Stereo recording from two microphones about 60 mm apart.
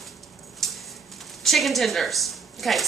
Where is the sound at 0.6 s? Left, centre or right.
Centre.